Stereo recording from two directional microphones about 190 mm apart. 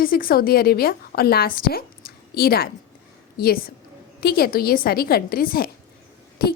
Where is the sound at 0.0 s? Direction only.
50° left (ahead or behind).